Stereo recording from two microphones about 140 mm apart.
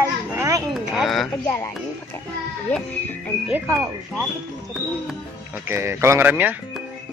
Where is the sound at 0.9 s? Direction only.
Centre (ahead or behind).